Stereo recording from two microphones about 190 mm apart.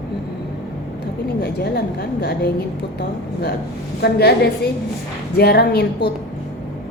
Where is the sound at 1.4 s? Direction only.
60° left (ahead or behind).